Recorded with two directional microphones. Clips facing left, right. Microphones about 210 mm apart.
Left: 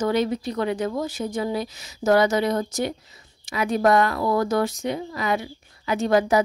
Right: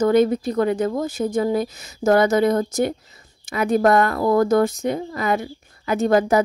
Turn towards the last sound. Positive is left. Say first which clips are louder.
# right 3 dB
turn(degrees=-50)  # may be behind; listen again after turning